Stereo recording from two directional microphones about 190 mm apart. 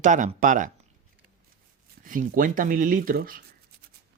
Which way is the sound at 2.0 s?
45° right (ahead or behind).